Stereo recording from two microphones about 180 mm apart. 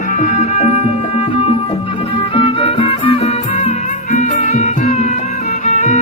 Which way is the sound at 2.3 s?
30° left (ahead or behind).